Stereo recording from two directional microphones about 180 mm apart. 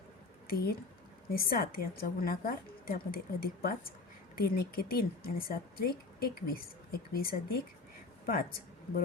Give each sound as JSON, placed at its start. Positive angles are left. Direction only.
{"t": 0.4, "sound": "speech", "side_deg": 55}
{"t": 8.3, "sound": "speech", "side_deg": 55}